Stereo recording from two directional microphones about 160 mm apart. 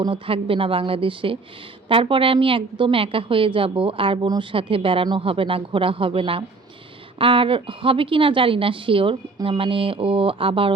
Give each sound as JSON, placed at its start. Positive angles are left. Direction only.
{"t": 0.0, "sound": "a woman's voice", "side_deg": -35}